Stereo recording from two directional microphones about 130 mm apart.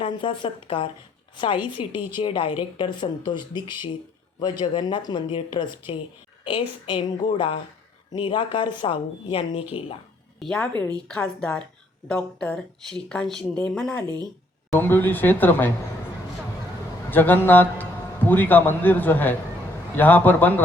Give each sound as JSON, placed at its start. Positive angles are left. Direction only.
{"t": 0.0, "sound": "a woman's voice", "side_deg": 40}
{"t": 10.4, "sound": "speech", "side_deg": 10}
{"t": 17.1, "sound": "a man's voice", "side_deg": 15}